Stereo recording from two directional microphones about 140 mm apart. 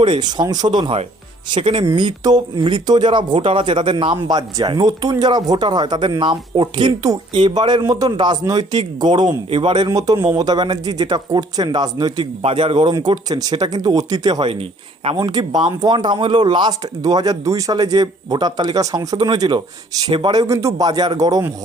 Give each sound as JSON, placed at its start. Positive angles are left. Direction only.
{"t": 0.0, "sound": "speech", "side_deg": -30}
{"t": 12.4, "sound": "speech", "side_deg": -40}